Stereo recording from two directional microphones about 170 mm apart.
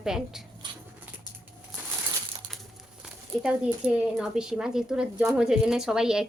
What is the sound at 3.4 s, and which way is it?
A woman's voice, 5° right (ahead or behind).